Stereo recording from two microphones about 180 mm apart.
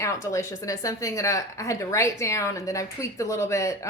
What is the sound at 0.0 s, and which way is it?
Speech, 15° left (ahead or behind).